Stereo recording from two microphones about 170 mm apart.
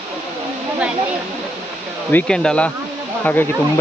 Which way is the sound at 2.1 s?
5° left (ahead or behind).